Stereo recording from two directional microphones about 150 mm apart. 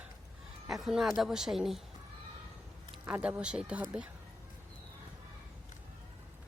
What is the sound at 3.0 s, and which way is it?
Speech, 10° right (ahead or behind).